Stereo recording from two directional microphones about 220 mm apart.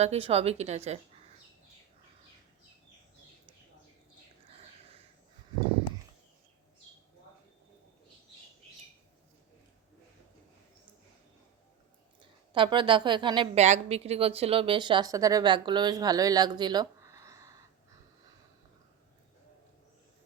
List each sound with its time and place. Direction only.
0.0 s a woman's voice: 25° right (ahead or behind)
12.5 s a woman's voice: 20° right (ahead or behind)